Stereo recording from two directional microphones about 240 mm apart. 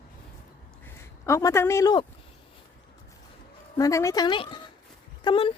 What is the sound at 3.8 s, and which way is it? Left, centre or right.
Speech, centre.